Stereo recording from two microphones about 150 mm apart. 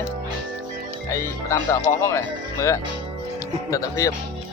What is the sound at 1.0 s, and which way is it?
Speech, 20° left (ahead or behind).